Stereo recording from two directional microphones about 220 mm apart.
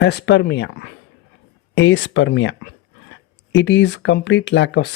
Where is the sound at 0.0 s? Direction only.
50° left (ahead or behind).